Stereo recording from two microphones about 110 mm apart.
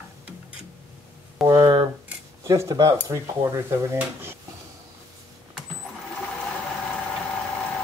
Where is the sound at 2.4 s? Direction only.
30° right (ahead or behind).